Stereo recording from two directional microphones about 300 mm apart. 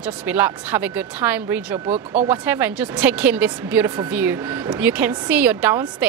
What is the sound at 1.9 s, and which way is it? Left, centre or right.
Speech, right.